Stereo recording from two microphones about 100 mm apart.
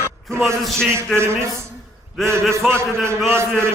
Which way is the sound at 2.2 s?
25° right (ahead or behind).